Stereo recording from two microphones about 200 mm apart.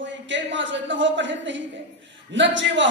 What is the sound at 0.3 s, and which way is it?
Speech, 65° right (ahead or behind).